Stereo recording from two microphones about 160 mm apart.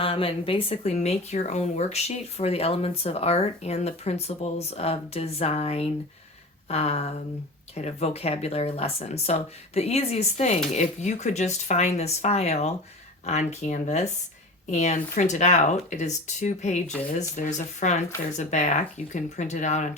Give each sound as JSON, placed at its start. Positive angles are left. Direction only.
{"t": 0.0, "sound": "speech", "side_deg": 35}